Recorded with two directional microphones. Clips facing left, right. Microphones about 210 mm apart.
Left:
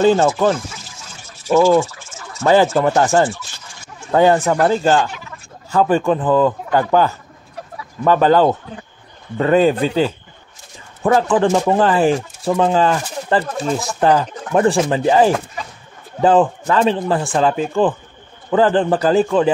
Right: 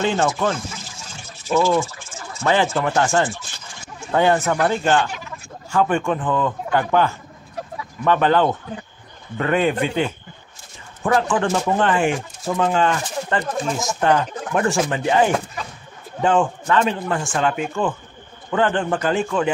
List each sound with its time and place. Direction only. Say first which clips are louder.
0.0 s speech: left 7 dB; 35° left (ahead or behind)
2.4 s speech: left 6 dB; 40° left (ahead or behind)